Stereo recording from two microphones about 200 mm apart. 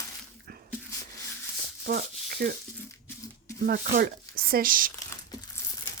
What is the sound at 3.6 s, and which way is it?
Speech, 45° right (ahead or behind).